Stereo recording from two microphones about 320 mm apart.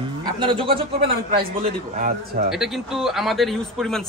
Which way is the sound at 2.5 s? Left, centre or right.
Centre.